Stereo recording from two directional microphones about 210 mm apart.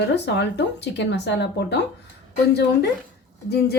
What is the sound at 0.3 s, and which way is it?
Speech, 55° left (ahead or behind).